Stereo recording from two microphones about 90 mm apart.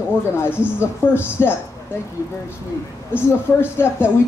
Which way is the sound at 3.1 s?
25° left (ahead or behind).